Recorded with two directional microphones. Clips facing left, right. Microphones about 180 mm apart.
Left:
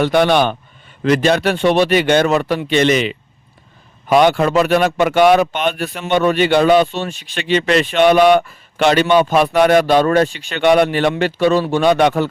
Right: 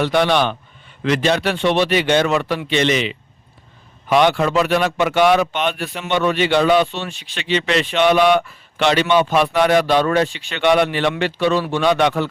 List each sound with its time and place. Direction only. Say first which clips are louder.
0.0 s speech: left 3 dB; 50° left (ahead or behind)